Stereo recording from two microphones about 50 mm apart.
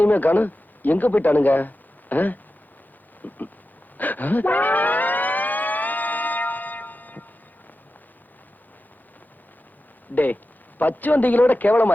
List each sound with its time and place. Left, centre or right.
0.0 s a man's voice: left
3.9 s siren: left
10.8 s a man's voice: left